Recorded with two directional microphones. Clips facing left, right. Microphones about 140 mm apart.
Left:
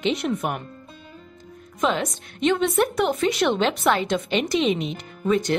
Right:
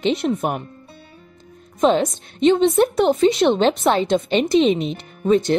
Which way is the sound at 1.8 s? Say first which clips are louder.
Right 7 dB; 30° right (ahead or behind).